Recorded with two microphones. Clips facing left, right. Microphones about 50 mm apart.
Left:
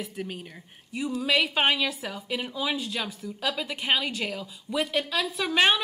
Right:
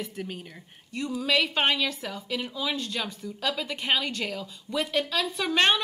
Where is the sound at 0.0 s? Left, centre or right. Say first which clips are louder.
Even; centre.